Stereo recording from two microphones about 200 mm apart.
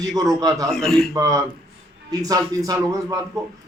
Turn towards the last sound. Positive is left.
turn(degrees=-15)  # may be behind; listen again after turning